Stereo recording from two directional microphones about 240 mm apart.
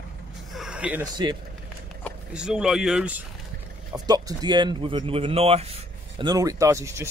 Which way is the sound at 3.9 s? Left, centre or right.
Centre.